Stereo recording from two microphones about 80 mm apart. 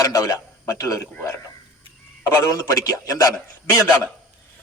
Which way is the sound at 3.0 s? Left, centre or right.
Left.